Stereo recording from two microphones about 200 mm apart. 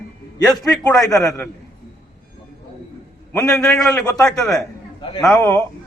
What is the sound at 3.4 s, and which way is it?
A man's voice, 5° left (ahead or behind).